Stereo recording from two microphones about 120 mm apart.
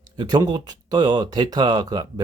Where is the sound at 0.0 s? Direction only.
35° right (ahead or behind).